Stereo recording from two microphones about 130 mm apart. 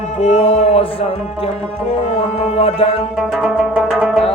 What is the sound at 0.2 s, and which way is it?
Music, 55° left (ahead or behind).